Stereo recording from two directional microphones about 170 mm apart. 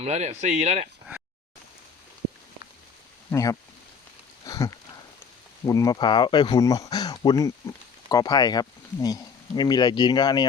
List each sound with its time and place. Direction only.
0.0 s speech: 40° right (ahead or behind)
3.3 s speech: 20° left (ahead or behind)
4.4 s sniff: 20° left (ahead or behind)
5.6 s speech: 20° left (ahead or behind)